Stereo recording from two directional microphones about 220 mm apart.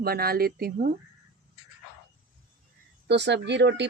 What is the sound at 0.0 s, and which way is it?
Speech, 45° right (ahead or behind).